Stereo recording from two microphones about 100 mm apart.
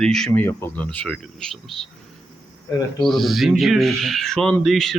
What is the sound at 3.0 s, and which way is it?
Speech, centre (ahead or behind).